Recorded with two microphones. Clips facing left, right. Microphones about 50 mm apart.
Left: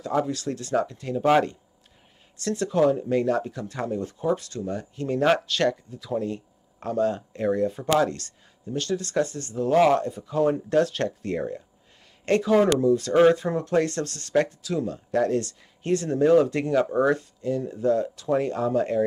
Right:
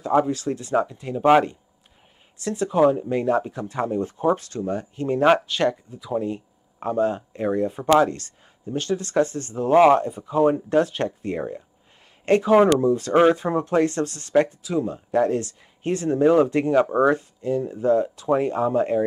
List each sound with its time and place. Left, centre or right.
0.0 s speech: right